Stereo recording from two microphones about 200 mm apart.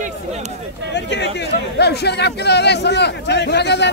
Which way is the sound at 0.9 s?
60° left (ahead or behind).